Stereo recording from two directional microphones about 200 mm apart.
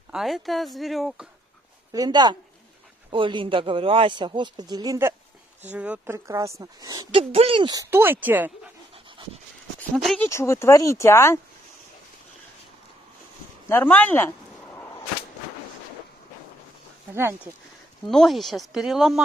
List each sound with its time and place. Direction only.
0.1 s speech: centre (ahead or behind)
1.9 s a woman's voice: 20° right (ahead or behind)
9.8 s speech: 5° left (ahead or behind)
10.2 s speech: 15° left (ahead or behind)
13.7 s a sound: 10° left (ahead or behind)
17.1 s a woman's voice: 10° right (ahead or behind)
18.0 s speech: centre (ahead or behind)